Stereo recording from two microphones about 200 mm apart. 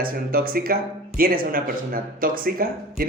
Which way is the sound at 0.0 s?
50° right (ahead or behind).